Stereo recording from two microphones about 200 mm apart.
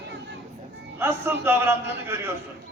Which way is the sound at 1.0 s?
10° right (ahead or behind).